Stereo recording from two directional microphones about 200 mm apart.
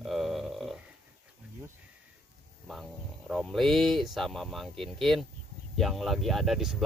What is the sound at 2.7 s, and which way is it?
Speech, centre (ahead or behind).